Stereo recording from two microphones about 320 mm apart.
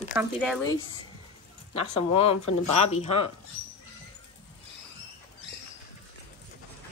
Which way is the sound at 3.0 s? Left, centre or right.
Centre.